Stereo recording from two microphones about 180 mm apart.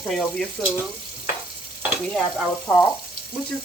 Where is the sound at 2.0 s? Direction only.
Centre (ahead or behind).